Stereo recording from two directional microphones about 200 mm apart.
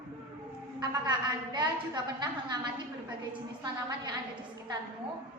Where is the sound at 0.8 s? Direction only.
20° right (ahead or behind).